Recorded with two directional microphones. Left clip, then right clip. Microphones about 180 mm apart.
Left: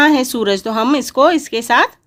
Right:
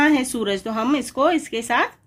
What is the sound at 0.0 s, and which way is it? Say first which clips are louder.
Speech: left 6 dB; 40° left (ahead or behind).